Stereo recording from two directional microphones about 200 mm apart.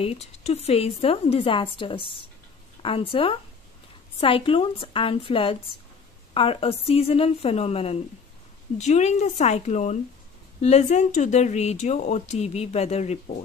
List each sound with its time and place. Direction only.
0.0 s a woman's voice: 30° left (ahead or behind)